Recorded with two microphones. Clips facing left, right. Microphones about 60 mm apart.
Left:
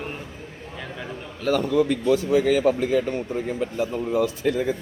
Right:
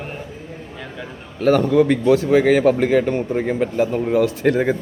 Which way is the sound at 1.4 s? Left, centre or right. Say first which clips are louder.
Right 6 dB; right.